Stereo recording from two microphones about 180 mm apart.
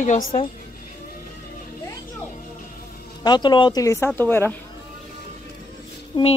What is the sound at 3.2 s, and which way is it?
Speech, 25° left (ahead or behind).